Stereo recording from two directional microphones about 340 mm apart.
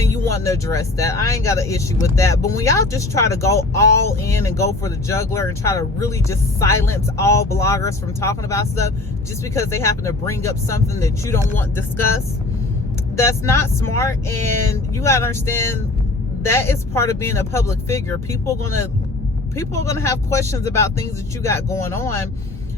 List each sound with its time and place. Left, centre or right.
0.3 s speech: centre
13.1 s speech: centre
19.5 s speech: centre